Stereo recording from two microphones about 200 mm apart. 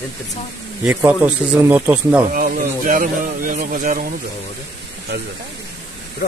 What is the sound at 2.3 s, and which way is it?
Speech, 45° right (ahead or behind).